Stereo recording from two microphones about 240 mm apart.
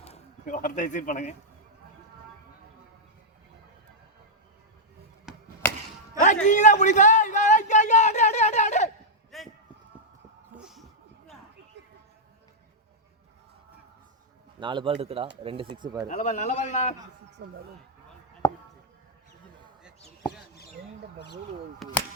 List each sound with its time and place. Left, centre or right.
0.0 s speech: left
5.3 s chop: centre
6.4 s a sound: left
9.3 s run: centre
10.6 s a sound: centre
14.6 s a man's voice: centre
16.0 s a man's voice: left
17.4 s speech: right
18.4 s a sound: centre
21.8 s speech: centre